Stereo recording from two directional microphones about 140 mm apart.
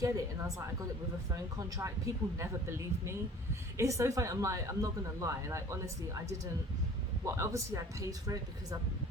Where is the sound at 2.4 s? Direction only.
20° right (ahead or behind).